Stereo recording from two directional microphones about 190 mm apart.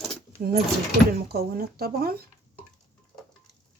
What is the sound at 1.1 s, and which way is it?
Speech, 55° right (ahead or behind).